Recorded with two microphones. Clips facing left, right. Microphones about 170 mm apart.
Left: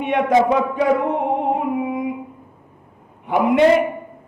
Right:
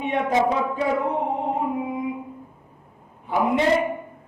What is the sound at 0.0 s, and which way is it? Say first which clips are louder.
Speech: left 5 dB; 70° left (ahead or behind).